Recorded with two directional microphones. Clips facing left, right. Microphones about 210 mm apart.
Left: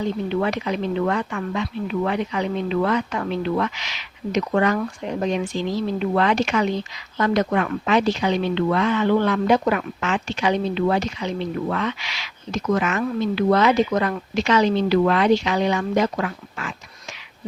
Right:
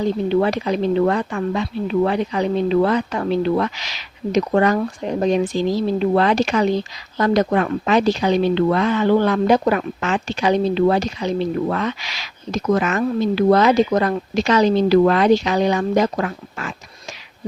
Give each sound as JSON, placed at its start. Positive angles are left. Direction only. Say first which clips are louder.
{"t": 0.0, "sound": "speech", "louder": "right 5 dB", "side_deg": -35}